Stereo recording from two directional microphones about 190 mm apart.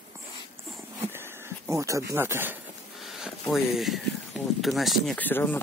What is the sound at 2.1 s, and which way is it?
Speech, 10° right (ahead or behind).